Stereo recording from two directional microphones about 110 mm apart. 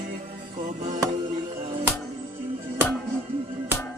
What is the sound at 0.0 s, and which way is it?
Music, 70° right (ahead or behind).